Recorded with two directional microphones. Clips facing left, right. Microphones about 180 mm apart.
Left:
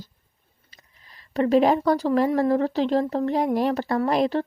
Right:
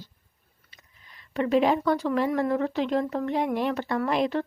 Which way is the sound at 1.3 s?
35° left (ahead or behind).